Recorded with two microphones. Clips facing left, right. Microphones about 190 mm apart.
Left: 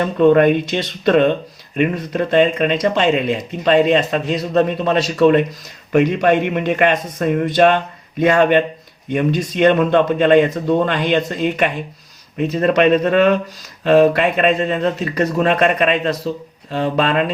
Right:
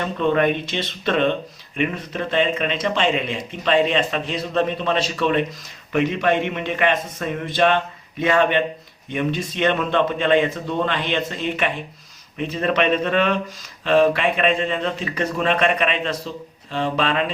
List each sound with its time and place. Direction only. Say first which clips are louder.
0.0 s a man's voice: left 8 dB; 45° left (ahead or behind)